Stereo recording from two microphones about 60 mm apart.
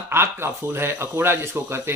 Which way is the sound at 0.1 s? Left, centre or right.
Right.